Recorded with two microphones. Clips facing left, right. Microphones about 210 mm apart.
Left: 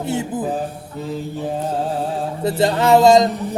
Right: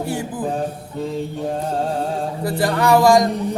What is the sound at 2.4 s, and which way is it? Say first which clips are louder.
Speech: left 3 dB; 25° left (ahead or behind).